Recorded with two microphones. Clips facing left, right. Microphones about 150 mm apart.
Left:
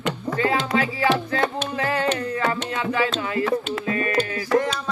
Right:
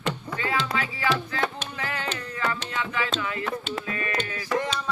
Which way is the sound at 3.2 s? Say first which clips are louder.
Left 7 dB; 35° left (ahead or behind).